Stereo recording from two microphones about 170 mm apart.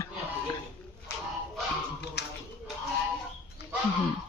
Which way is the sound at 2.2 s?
75° left (ahead or behind).